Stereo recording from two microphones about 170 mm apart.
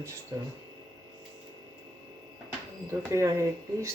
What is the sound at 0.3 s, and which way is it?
Speech, 20° right (ahead or behind).